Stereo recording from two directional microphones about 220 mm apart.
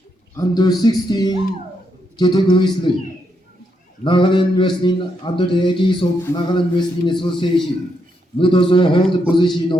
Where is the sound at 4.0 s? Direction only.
20° left (ahead or behind).